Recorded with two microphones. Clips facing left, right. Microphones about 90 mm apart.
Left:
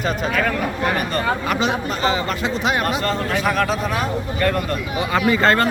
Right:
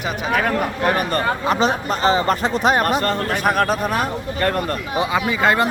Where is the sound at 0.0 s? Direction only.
10° right (ahead or behind).